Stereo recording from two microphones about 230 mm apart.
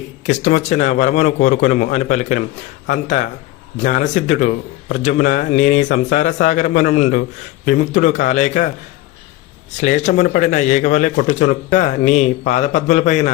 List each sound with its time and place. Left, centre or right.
0.3 s speech: left
9.7 s speech: left